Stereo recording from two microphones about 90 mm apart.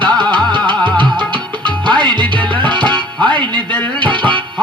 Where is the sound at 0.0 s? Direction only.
60° right (ahead or behind).